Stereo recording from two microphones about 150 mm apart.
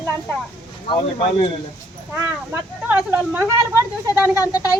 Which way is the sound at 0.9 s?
35° left (ahead or behind).